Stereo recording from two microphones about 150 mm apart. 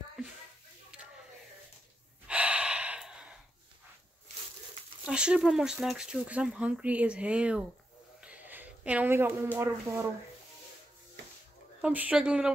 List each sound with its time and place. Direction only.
2.2 s gasp: 5° right (ahead or behind)
5.0 s speech: 5° right (ahead or behind)
8.2 s a sound: 10° right (ahead or behind)
9.6 s speech: 20° right (ahead or behind)
11.8 s speech: 10° right (ahead or behind)